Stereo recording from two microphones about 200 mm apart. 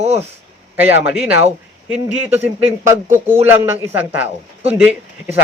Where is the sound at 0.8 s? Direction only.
10° right (ahead or behind).